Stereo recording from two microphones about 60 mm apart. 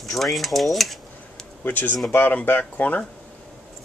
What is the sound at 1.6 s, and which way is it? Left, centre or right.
Speech, left.